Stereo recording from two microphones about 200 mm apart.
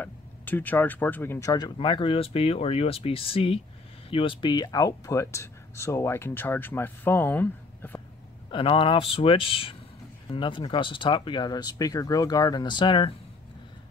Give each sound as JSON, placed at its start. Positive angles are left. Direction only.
{"t": 0.0, "sound": "speech", "side_deg": 10}
{"t": 8.5, "sound": "speech", "side_deg": 25}